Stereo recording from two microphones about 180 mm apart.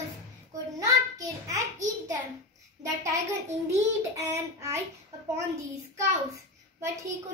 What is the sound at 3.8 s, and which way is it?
Child singing, 15° right (ahead or behind).